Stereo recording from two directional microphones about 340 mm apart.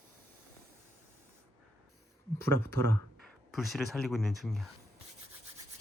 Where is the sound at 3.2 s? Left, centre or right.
Centre.